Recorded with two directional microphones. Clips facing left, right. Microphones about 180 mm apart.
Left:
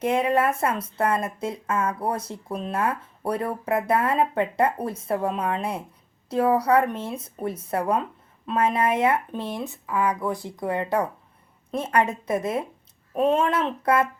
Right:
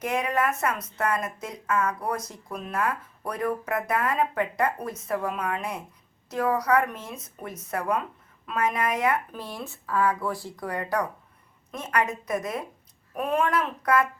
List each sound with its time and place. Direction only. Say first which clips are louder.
0.0 s speech: left 5 dB; 30° left (ahead or behind)